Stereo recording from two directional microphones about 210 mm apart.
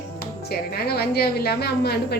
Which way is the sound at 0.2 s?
50° left (ahead or behind).